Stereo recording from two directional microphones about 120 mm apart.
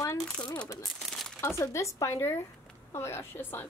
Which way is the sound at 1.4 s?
25° left (ahead or behind).